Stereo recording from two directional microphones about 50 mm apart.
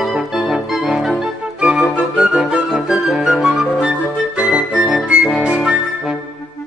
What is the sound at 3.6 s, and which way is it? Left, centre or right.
Music, right.